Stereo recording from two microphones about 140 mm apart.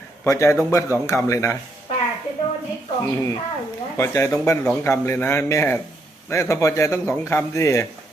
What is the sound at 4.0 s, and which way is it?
Speech, 20° left (ahead or behind).